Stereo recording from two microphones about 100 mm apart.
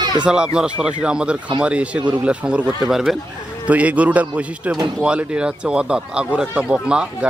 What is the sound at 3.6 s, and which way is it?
Speech, 15° right (ahead or behind).